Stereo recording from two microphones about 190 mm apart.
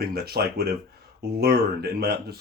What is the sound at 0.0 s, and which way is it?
Speech, 55° right (ahead or behind).